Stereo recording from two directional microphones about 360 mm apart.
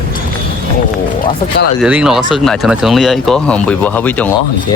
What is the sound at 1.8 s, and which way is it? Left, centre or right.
Speech, centre.